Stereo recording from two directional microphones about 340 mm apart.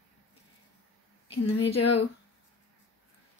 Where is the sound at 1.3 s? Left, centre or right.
Centre.